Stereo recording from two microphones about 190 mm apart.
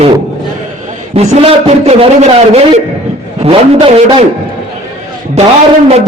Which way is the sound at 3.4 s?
30° right (ahead or behind).